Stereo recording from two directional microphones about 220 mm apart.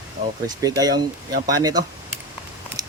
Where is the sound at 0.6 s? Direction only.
15° right (ahead or behind).